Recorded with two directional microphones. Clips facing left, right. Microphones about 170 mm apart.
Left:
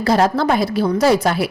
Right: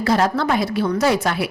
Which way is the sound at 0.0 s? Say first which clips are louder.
Left 3 dB; 35° left (ahead or behind).